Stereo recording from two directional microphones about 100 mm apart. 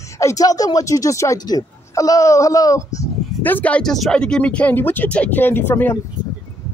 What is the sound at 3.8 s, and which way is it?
Speech, 5° left (ahead or behind).